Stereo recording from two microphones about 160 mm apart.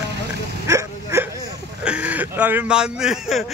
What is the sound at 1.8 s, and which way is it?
Speech, 5° right (ahead or behind).